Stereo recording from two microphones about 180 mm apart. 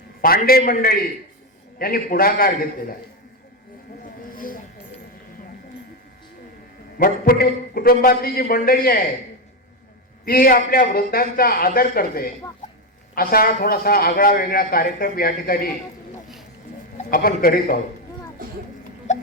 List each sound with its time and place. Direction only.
0.2 s a man's voice: 55° left (ahead or behind)
4.3 s a sound: 50° left (ahead or behind)
7.0 s a man's voice: 55° left (ahead or behind)
10.2 s a man's voice: 55° left (ahead or behind)
17.1 s a man's voice: 55° left (ahead or behind)